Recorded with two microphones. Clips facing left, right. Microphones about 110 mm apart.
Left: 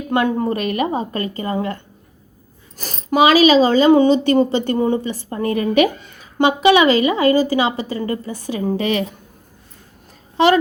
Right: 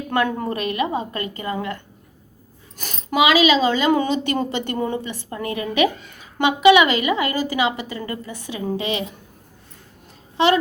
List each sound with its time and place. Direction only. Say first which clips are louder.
0.1 s a woman's voice: left 4 dB; 20° left (ahead or behind)
0.7 s speech: left 3 dB; 35° left (ahead or behind)
8.8 s a woman's voice: left 7 dB; 20° right (ahead or behind)
10.3 s a child's voice: left 3 dB; 40° left (ahead or behind)